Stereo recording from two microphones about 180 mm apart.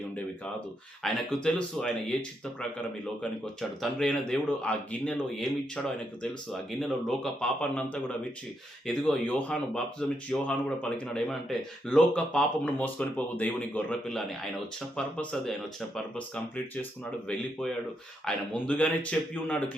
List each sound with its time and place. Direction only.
1.0 s speech: 5° left (ahead or behind)
18.3 s speech: 5° left (ahead or behind)